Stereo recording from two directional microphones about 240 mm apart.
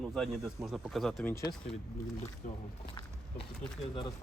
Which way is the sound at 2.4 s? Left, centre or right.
Left.